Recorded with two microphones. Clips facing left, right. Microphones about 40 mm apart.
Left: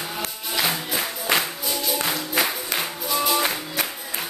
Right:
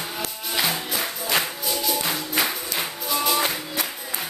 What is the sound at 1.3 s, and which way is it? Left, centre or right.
Music, centre.